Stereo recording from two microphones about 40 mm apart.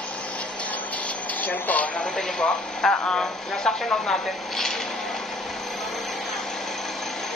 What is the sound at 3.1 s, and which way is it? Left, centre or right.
Speech, left.